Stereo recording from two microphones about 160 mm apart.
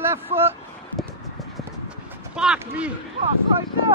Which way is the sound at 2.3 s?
5° right (ahead or behind).